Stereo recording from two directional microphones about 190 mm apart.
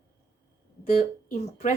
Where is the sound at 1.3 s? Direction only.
40° left (ahead or behind).